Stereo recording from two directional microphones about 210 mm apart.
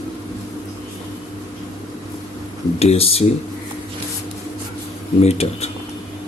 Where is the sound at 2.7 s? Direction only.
30° left (ahead or behind).